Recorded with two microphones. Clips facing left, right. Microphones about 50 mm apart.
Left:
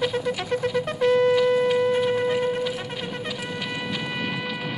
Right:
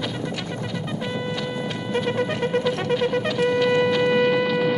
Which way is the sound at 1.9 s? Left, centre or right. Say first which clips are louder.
Left 2 dB; right.